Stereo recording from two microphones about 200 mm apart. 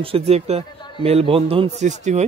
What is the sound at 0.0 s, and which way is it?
Speech, 30° right (ahead or behind).